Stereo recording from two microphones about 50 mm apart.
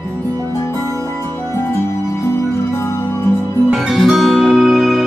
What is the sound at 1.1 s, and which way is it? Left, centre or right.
Music, left.